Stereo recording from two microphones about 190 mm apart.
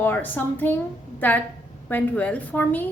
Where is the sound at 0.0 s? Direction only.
10° left (ahead or behind).